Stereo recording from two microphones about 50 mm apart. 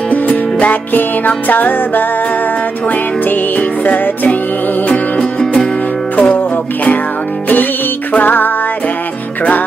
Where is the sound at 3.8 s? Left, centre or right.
Left.